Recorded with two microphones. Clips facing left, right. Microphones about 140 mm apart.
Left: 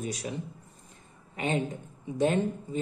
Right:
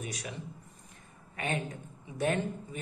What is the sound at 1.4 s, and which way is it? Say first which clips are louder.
Speech: left 5 dB; 20° left (ahead or behind).